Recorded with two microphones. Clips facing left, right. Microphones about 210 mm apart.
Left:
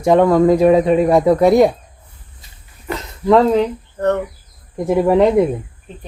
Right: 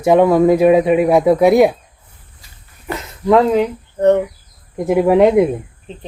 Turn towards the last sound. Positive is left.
turn(degrees=-5)  # may be behind; listen again after turning